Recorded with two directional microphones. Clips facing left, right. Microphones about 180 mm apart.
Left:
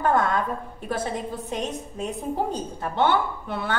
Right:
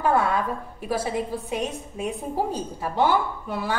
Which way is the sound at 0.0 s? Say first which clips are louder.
Even; 10° right (ahead or behind).